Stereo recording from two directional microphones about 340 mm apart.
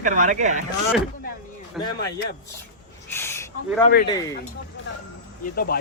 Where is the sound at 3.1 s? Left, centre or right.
Centre.